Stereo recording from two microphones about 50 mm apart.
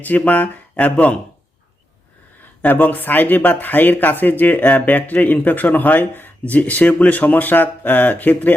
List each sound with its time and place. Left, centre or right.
0.0 s speech: left
2.4 s speech: left